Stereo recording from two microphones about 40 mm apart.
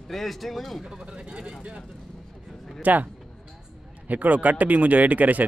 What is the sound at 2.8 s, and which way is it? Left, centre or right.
Speech, right.